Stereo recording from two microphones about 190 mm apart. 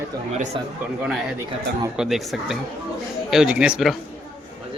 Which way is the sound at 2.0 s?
Centre (ahead or behind).